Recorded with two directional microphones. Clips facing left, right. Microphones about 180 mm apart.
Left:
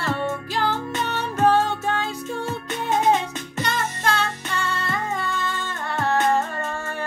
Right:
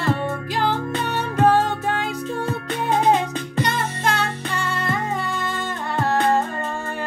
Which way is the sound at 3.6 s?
15° right (ahead or behind).